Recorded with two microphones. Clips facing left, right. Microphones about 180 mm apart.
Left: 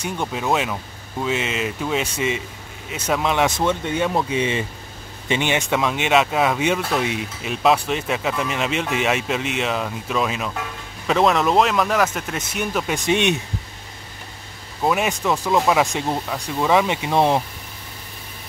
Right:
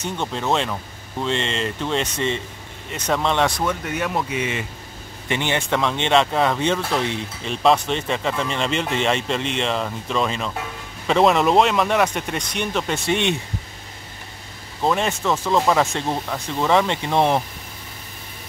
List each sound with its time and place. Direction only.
0.0 s speech: 10° left (ahead or behind)
3.4 s speech: 25° left (ahead or behind)
5.3 s speech: 15° left (ahead or behind)
13.0 s speech: 20° left (ahead or behind)
14.8 s speech: 10° left (ahead or behind)